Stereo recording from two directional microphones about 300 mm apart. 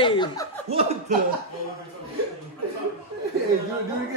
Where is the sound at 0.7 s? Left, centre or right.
Centre.